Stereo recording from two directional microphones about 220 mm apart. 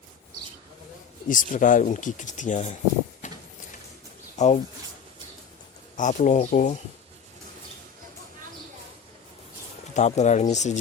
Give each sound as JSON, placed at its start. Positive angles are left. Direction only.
{"t": 1.3, "sound": "speech", "side_deg": 35}
{"t": 3.2, "sound": "a sound", "side_deg": 35}
{"t": 4.4, "sound": "speech", "side_deg": 30}
{"t": 6.0, "sound": "speech", "side_deg": 35}
{"t": 9.9, "sound": "speech", "side_deg": 30}